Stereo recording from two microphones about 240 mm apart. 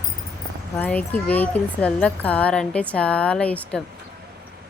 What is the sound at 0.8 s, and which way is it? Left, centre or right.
Speech, centre.